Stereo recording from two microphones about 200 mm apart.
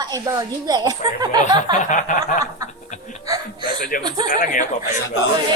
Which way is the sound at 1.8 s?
40° left (ahead or behind).